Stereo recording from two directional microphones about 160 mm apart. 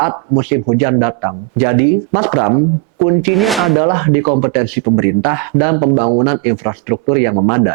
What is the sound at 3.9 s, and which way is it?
Speech, 20° right (ahead or behind).